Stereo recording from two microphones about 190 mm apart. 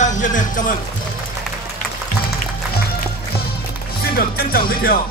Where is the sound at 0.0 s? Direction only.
40° left (ahead or behind).